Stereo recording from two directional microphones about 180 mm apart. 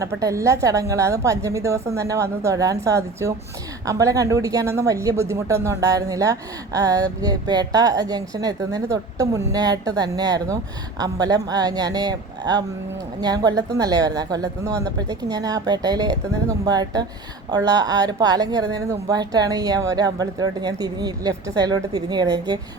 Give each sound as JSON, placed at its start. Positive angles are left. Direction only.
{"t": 0.0, "sound": "a woman's voice", "side_deg": -20}